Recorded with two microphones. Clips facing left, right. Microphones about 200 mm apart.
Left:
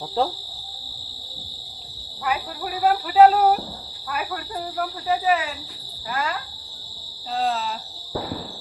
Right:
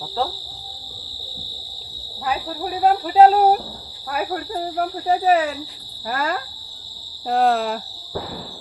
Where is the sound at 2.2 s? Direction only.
35° right (ahead or behind); by 7.8 s 60° right (ahead or behind).